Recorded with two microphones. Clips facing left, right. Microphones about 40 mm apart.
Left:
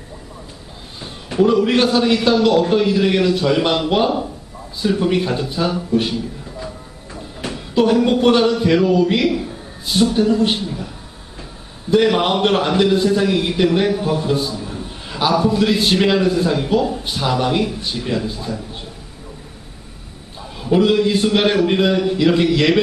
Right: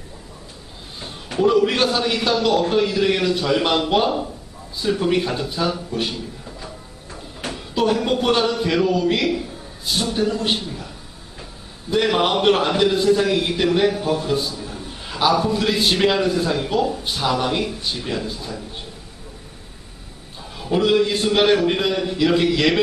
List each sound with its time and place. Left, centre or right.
1.6 s a man's voice: centre
11.9 s a man's voice: centre
20.4 s a man's voice: centre